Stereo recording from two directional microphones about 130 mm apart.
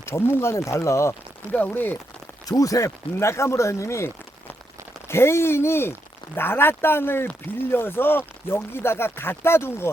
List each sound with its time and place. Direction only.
0.0 s speech: 20° left (ahead or behind)
2.5 s speech: 25° left (ahead or behind)